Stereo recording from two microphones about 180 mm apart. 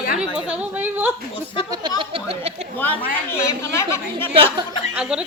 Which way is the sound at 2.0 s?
30° right (ahead or behind).